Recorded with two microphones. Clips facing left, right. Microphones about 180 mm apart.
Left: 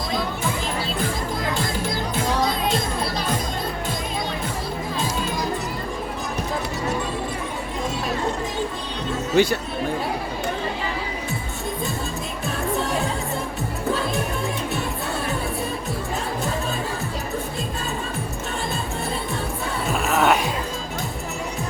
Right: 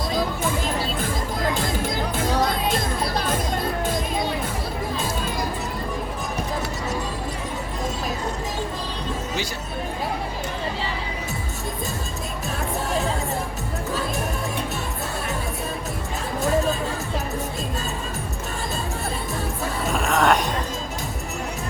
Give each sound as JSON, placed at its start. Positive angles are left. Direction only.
{"t": 2.1, "sound": "music", "side_deg": -50}
{"t": 9.3, "sound": "speech", "side_deg": 60}
{"t": 19.9, "sound": "music", "side_deg": 5}